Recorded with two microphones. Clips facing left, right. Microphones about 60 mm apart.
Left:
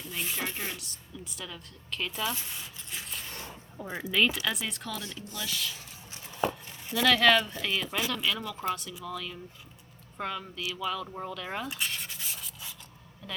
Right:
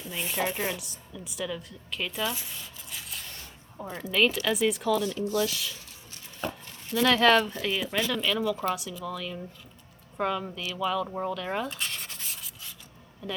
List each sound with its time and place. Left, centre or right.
0.0 s a woman's voice: centre
2.6 s a sound: centre
3.2 s a sound: left
3.8 s speech: centre
4.1 s a woman's voice: centre
6.9 s a woman's voice: centre
10.8 s sanding: centre
13.2 s a woman's voice: centre